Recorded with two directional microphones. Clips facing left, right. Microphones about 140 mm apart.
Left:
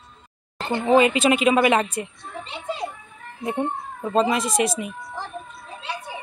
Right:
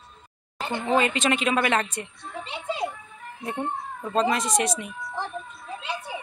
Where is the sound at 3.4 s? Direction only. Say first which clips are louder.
Left 4 dB; 20° left (ahead or behind).